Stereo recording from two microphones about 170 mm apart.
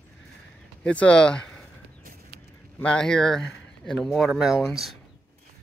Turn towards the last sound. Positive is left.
turn(degrees=0)  # may be behind; listen again after turning